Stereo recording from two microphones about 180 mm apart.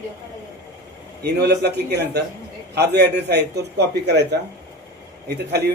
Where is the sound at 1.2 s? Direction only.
65° right (ahead or behind).